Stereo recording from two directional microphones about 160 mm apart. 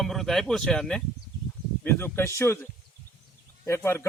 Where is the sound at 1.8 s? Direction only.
15° left (ahead or behind).